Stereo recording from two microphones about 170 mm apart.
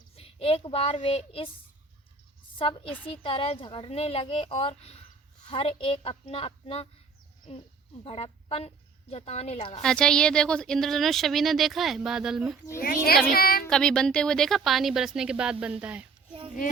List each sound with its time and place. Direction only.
0.2 s speech: 35° left (ahead or behind)
2.8 s a woman's voice: 10° left (ahead or behind)
3.1 s a woman's voice: 35° left (ahead or behind)
9.8 s a woman's voice: 5° left (ahead or behind)
12.8 s speech: 60° left (ahead or behind)
13.7 s a woman's voice: 5° left (ahead or behind)